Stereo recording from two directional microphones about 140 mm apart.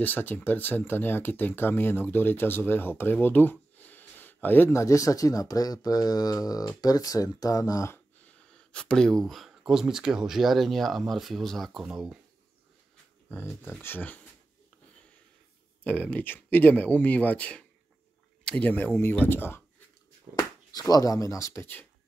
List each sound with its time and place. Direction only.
0.0 s speech: 15° left (ahead or behind); by 12.2 s 5° right (ahead or behind)
13.6 s speech: 15° left (ahead or behind)
15.8 s speech: 10° left (ahead or behind)
20.9 s speech: 25° left (ahead or behind)